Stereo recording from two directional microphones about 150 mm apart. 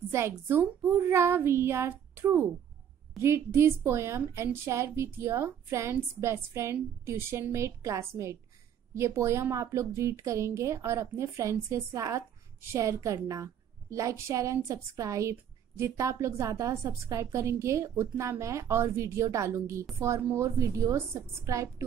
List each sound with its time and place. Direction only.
0.1 s a woman's voice: 15° right (ahead or behind)